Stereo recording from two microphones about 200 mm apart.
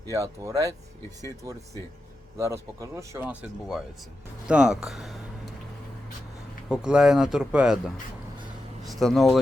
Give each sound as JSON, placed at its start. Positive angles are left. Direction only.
{"t": 0.0, "sound": "speech", "side_deg": -15}
{"t": 2.4, "sound": "speech", "side_deg": -15}
{"t": 4.4, "sound": "speech", "side_deg": -5}
{"t": 6.7, "sound": "speech", "side_deg": -5}